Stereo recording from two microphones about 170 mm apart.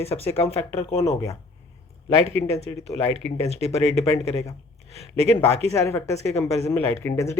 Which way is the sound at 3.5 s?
35° right (ahead or behind).